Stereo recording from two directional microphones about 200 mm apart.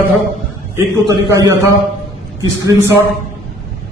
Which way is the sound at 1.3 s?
15° right (ahead or behind).